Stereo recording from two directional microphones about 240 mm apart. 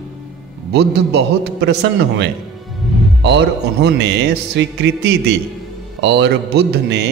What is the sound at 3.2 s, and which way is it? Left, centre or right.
A man's voice, right.